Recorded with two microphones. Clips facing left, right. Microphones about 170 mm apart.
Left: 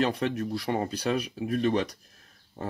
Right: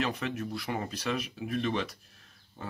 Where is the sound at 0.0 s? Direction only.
35° left (ahead or behind).